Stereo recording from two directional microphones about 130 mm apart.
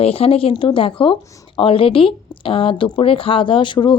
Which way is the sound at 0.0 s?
50° left (ahead or behind).